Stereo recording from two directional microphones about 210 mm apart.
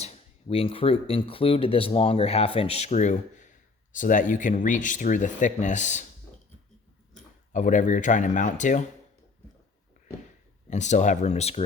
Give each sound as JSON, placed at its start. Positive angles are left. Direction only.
{"t": 0.0, "sound": "speech", "side_deg": 25}
{"t": 7.5, "sound": "speech", "side_deg": 35}
{"t": 10.7, "sound": "speech", "side_deg": 35}